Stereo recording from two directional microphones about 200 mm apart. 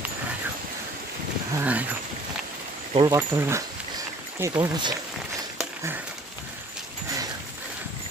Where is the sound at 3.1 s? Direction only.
15° right (ahead or behind).